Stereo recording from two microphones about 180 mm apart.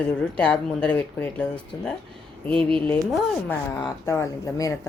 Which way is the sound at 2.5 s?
5° left (ahead or behind).